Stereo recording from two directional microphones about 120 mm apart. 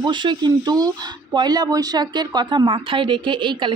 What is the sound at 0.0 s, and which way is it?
Speech, 40° right (ahead or behind).